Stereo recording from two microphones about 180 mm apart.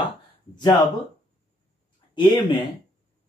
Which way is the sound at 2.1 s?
25° left (ahead or behind).